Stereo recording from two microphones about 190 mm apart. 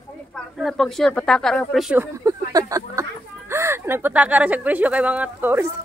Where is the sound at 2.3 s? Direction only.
15° right (ahead or behind).